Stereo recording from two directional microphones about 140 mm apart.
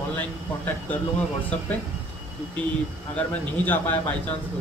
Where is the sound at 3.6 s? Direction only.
15° left (ahead or behind).